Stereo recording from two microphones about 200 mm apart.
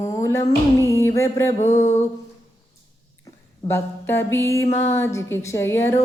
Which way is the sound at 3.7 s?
10° left (ahead or behind).